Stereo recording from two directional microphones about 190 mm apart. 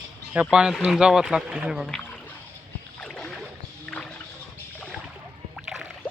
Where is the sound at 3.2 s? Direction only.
Centre (ahead or behind).